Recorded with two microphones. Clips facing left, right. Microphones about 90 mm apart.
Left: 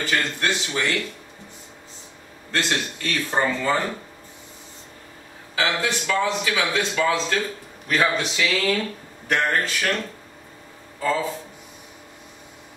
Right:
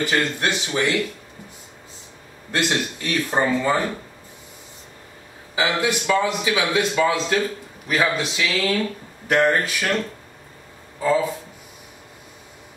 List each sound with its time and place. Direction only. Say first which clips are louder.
0.0 s a man's voice: right 2 dB; 15° right (ahead or behind)
2.5 s a man's voice: right 2 dB; 15° right (ahead or behind)
5.6 s a man's voice: right 2 dB; 15° right (ahead or behind)
7.9 s a man's voice: even; 5° right (ahead or behind)
11.0 s speech: right 4 dB; 10° right (ahead or behind)